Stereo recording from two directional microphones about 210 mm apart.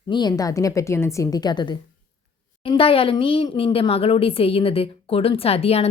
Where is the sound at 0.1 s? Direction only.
20° left (ahead or behind).